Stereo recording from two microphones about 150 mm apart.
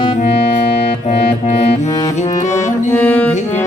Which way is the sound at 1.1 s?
45° left (ahead or behind).